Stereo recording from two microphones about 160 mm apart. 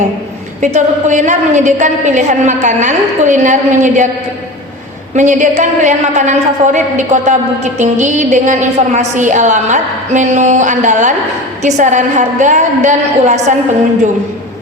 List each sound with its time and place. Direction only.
0.6 s a woman's voice: 50° right (ahead or behind)
5.1 s a woman's voice: 50° right (ahead or behind)